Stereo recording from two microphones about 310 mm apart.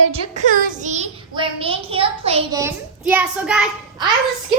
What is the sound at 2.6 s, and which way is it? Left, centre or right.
Child singing, centre.